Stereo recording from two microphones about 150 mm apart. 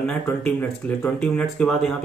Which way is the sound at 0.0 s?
10° left (ahead or behind).